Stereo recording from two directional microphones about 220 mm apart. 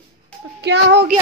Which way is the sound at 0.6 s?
50° right (ahead or behind).